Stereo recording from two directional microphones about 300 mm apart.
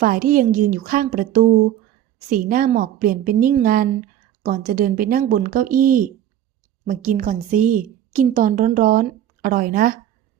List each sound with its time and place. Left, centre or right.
0.0 s a woman's voice: right